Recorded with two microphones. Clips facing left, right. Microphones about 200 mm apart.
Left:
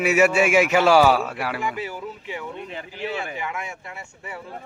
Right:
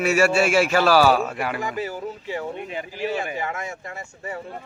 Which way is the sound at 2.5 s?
15° right (ahead or behind).